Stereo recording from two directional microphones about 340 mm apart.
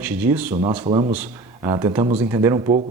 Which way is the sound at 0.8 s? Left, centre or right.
Centre.